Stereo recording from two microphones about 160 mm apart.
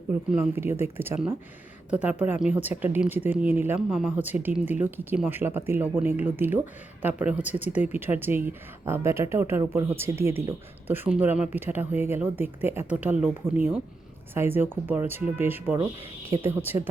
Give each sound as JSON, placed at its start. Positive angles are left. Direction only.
{"t": 0.1, "sound": "speech", "side_deg": -15}
{"t": 3.8, "sound": "speech", "side_deg": -5}